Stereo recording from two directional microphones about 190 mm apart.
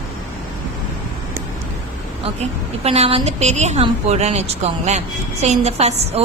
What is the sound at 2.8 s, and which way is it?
A woman's voice, 35° right (ahead or behind).